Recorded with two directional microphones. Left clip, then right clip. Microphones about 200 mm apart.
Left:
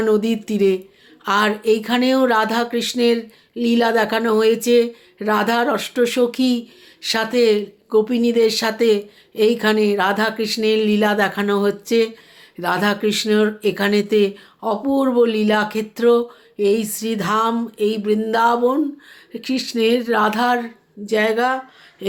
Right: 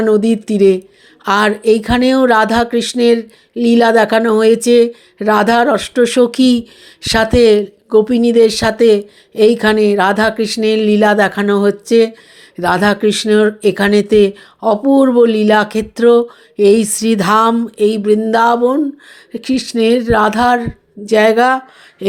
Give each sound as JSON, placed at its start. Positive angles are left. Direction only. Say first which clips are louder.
{"t": 0.0, "sound": "speech", "louder": "right 6 dB", "side_deg": -25}